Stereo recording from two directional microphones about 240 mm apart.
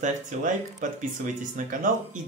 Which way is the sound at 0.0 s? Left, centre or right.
Right.